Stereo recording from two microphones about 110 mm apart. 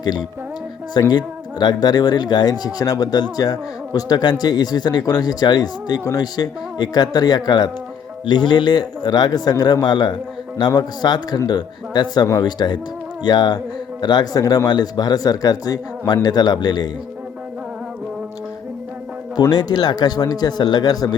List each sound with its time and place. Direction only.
0.0 s music: 40° left (ahead or behind)
0.9 s speech: 40° left (ahead or behind)
19.4 s speech: 35° left (ahead or behind)